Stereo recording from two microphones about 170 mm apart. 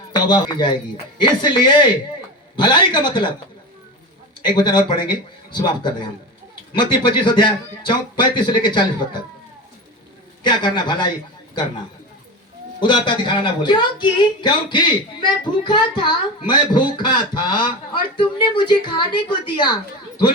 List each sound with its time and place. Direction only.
0.1 s speech: 25° left (ahead or behind)
4.4 s speech: 25° left (ahead or behind)
10.4 s speech: 25° left (ahead or behind)
12.8 s speech: 25° left (ahead or behind)